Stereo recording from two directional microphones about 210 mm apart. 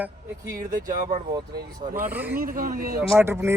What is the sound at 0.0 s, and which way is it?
Speech, 15° right (ahead or behind).